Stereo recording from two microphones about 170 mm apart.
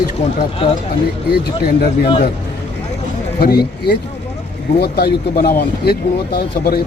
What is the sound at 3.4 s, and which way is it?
Speech, 70° left (ahead or behind).